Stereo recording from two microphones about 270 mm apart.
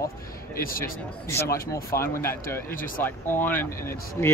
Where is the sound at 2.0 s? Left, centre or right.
Centre.